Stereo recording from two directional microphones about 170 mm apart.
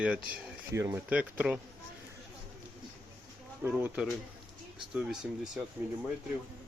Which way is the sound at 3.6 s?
10° right (ahead or behind).